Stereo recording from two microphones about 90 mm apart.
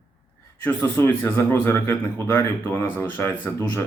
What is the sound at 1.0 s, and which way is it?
Speech, 25° left (ahead or behind).